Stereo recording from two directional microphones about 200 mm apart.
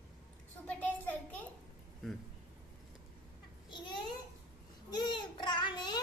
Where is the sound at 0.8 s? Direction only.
10° left (ahead or behind).